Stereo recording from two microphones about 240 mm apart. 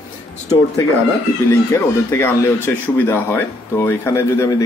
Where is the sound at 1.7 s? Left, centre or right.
Centre.